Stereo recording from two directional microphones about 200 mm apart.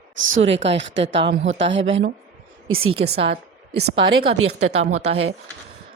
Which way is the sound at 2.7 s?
90° right.